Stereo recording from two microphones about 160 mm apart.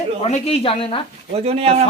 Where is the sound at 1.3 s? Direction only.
40° right (ahead or behind).